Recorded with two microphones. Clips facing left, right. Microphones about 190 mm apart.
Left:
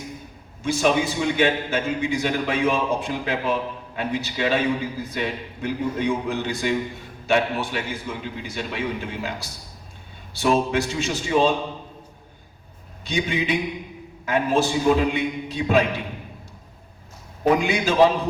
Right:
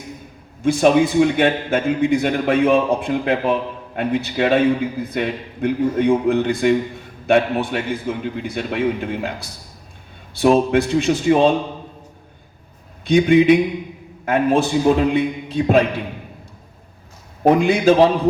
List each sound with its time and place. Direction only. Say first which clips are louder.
0.6 s a man's voice: right 7 dB; 55° right (ahead or behind)
13.1 s a man's voice: right 12 dB; 55° right (ahead or behind)
17.4 s a man's voice: right 6 dB; 55° right (ahead or behind)